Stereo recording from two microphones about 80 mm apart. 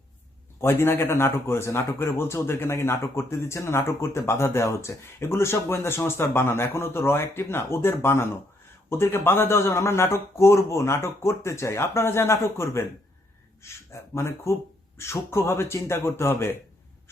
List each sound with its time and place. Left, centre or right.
0.6 s speech: left